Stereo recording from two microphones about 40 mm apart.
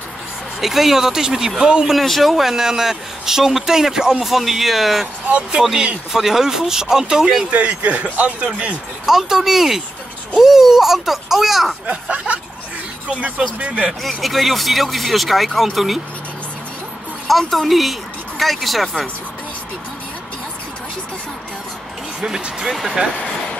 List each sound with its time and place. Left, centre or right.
0.6 s speech: centre
2.0 s speech: centre
5.6 s speech: centre
6.1 s speech: centre
7.5 s speech: right
9.0 s speech: centre
11.9 s speech: right
13.6 s speech: right
14.0 s speech: centre
17.3 s speech: centre
22.2 s speech: centre
23.1 s a sound: left